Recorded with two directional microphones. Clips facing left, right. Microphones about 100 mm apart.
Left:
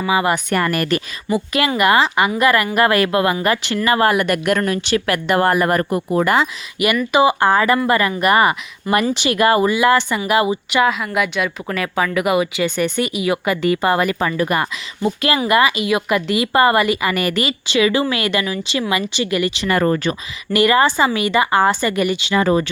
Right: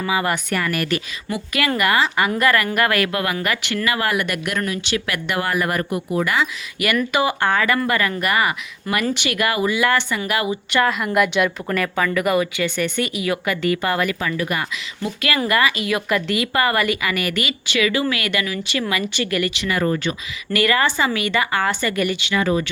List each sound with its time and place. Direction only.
0.1 s speech: 20° left (ahead or behind)
0.5 s speech: 40° left (ahead or behind)
1.8 s speech: 25° left (ahead or behind); by 6.5 s 40° left (ahead or behind)
7.1 s speech: 20° left (ahead or behind)
7.3 s speech: 35° left (ahead or behind)
9.8 s speech: 25° left (ahead or behind)
10.7 s a woman's voice: 10° left (ahead or behind)
10.9 s speech: centre (ahead or behind)
11.9 s speech: 15° left (ahead or behind); by 15.4 s 30° left (ahead or behind)
15.4 s speech: 20° left (ahead or behind)
19.6 s speech: 50° left (ahead or behind)
20.5 s speech: 20° left (ahead or behind)
21.8 s speech: 20° left (ahead or behind)
22.2 s speech: 35° left (ahead or behind)